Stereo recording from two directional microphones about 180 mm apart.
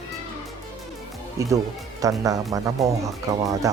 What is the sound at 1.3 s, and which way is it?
Speech, 20° right (ahead or behind).